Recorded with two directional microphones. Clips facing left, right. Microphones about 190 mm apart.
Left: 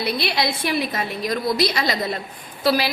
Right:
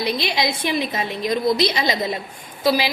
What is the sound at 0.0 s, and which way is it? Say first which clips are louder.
A woman's voice: right 1 dB; 15° right (ahead or behind).